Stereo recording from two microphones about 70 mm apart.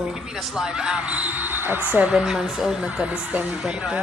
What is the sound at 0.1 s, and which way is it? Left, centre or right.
Speech, centre.